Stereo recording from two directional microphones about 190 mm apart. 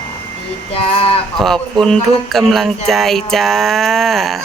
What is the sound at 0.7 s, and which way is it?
Speech, 30° left (ahead or behind).